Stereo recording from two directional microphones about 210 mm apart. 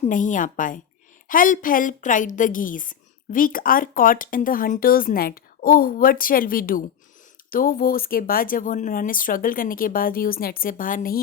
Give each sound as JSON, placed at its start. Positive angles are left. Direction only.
{"t": 0.0, "sound": "a woman's voice", "side_deg": 35}